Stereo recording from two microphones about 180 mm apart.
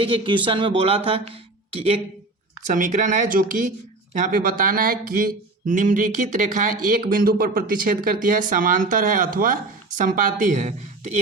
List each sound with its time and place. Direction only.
0.0 s speech: 30° right (ahead or behind)
2.7 s speech: 45° right (ahead or behind)